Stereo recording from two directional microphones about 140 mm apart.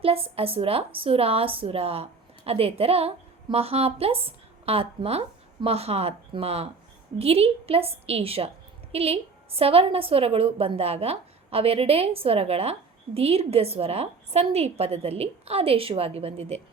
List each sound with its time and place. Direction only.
0.0 s a woman's voice: 45° right (ahead or behind)